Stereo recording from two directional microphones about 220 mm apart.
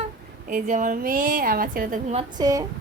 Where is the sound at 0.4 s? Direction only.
35° right (ahead or behind).